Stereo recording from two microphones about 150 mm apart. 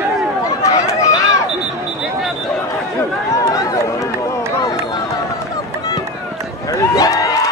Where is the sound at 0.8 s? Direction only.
20° left (ahead or behind).